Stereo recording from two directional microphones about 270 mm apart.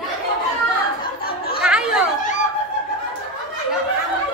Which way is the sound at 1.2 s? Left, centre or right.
Left.